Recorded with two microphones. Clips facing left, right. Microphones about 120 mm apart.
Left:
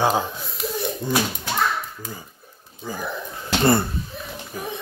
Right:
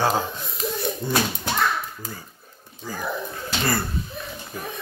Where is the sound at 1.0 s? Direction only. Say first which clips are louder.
Left 1 dB; 15° left (ahead or behind).